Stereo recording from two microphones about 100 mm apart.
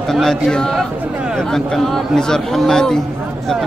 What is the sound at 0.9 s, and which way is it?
Speech, 15° right (ahead or behind).